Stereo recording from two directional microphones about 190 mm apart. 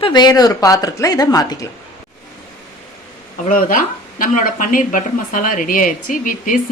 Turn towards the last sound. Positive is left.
turn(degrees=45)  # may be behind; listen again after turning